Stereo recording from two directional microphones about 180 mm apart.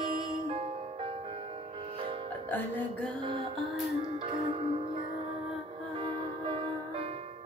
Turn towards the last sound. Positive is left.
turn(degrees=-30)  # may be behind; listen again after turning